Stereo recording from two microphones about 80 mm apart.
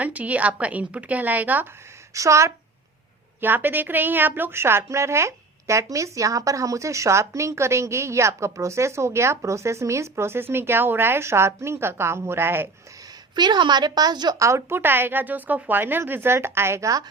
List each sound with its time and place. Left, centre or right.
0.0 s speech: centre
2.1 s a woman's voice: right
3.4 s a woman's voice: right
13.3 s a woman's voice: right
14.3 s a woman's voice: right
14.8 s speech: right